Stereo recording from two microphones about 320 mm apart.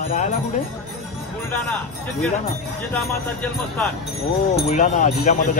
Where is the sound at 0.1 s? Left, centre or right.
Left.